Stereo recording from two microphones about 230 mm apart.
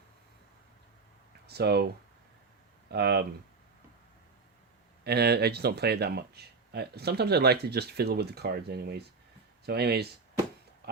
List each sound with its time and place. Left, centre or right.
1.5 s speech: right
2.9 s speech: right
5.0 s speech: right